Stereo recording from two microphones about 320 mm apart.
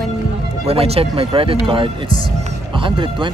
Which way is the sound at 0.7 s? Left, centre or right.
Centre.